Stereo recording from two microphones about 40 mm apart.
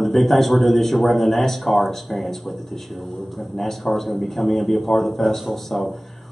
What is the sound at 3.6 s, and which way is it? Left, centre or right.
A man's voice, centre.